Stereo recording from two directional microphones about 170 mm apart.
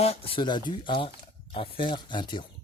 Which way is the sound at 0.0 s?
35° left (ahead or behind).